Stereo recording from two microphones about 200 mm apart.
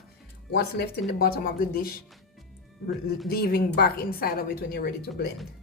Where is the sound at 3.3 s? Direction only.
50° left (ahead or behind).